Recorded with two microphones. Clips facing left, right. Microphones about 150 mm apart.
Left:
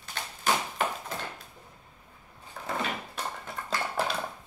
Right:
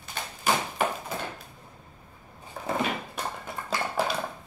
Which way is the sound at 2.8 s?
15° right (ahead or behind).